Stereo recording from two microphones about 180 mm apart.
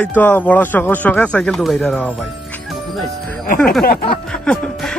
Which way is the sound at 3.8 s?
55° left (ahead or behind).